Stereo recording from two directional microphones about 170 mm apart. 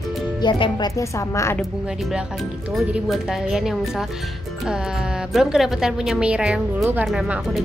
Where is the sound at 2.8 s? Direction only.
Centre (ahead or behind).